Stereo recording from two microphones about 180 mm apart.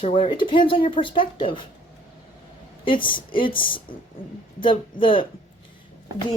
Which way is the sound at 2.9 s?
30° left (ahead or behind).